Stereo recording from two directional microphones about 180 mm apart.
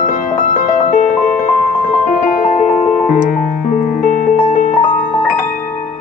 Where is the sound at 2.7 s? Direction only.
5° left (ahead or behind).